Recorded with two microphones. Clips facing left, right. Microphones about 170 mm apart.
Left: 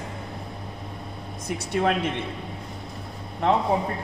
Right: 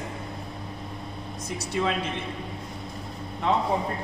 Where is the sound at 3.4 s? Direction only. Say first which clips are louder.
Left 3 dB; 55° left (ahead or behind).